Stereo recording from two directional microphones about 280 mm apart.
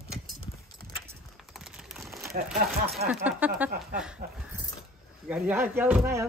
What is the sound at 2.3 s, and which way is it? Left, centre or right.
Speech, right.